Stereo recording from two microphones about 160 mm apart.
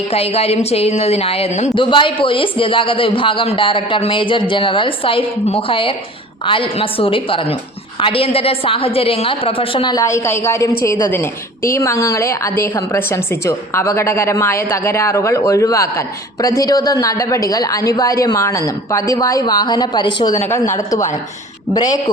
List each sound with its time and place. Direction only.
0.1 s a man's voice: 40° left (ahead or behind)
1.8 s a man's voice: 30° left (ahead or behind)